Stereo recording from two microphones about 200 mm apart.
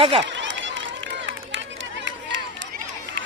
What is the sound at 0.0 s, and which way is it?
Speech, 30° right (ahead or behind).